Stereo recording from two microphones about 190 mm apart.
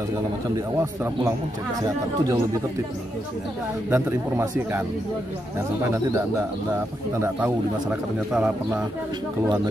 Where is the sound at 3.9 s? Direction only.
10° right (ahead or behind).